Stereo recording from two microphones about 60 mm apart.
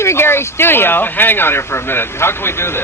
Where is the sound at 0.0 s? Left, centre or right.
Left.